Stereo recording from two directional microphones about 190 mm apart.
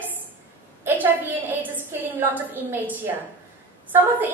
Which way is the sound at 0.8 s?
10° right (ahead or behind).